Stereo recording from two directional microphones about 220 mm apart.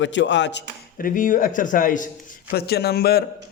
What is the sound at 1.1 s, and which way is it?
A man's voice, 35° left (ahead or behind).